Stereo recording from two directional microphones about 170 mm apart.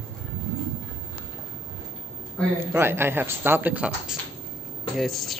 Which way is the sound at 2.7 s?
15° right (ahead or behind).